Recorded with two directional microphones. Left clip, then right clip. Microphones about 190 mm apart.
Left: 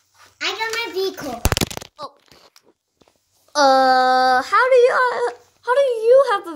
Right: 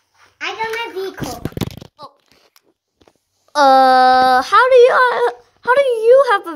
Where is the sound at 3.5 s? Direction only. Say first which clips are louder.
Right 4 dB; 25° right (ahead or behind).